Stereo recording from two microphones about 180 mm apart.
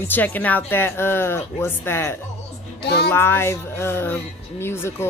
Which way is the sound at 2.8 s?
65° left (ahead or behind).